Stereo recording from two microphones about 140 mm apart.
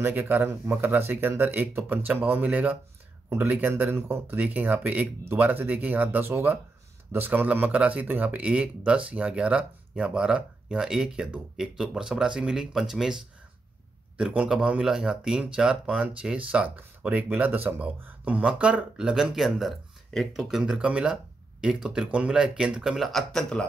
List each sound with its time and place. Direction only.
0.0 s speech: 15° right (ahead or behind); by 23.6 s centre (ahead or behind)